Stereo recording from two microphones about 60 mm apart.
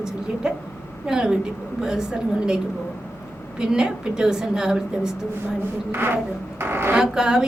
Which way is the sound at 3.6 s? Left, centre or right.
Centre.